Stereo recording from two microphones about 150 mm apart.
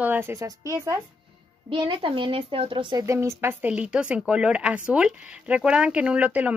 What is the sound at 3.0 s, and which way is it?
Speech, 20° right (ahead or behind).